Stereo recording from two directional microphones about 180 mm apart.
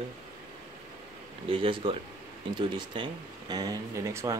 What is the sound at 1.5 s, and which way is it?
Speech, 30° right (ahead or behind).